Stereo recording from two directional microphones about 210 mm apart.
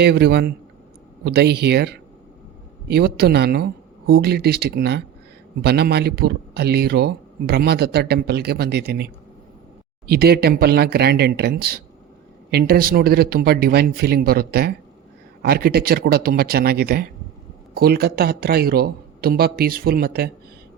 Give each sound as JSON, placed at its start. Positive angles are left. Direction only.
{"t": 0.0, "sound": "speech", "side_deg": -50}
{"t": 10.1, "sound": "speech", "side_deg": -50}